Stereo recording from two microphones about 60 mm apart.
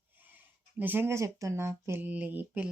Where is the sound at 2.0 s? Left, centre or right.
Right.